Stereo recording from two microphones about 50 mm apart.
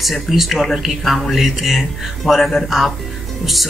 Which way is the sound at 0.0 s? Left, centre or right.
Centre.